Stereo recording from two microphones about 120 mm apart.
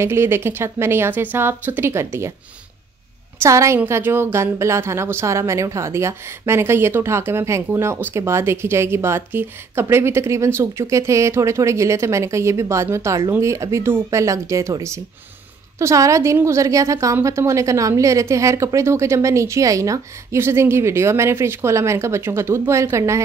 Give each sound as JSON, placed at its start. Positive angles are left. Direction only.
{"t": 0.0, "sound": "a woman's voice", "side_deg": -20}
{"t": 3.4, "sound": "a woman's voice", "side_deg": -25}